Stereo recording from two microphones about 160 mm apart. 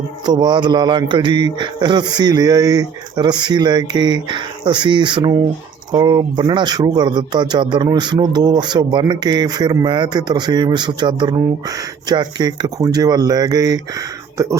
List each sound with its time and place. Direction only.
0.3 s speech: 25° right (ahead or behind)